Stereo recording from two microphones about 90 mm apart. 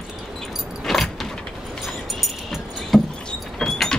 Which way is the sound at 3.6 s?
5° left (ahead or behind).